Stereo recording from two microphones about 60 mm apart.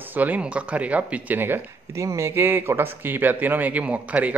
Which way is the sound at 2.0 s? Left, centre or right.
Right.